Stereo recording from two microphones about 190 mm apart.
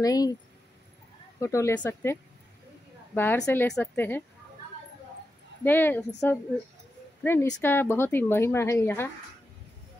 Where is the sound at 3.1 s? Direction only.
15° left (ahead or behind).